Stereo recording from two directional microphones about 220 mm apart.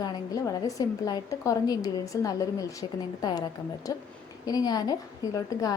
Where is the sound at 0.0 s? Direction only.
15° left (ahead or behind).